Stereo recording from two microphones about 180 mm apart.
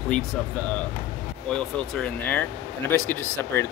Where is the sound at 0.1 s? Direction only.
5° left (ahead or behind).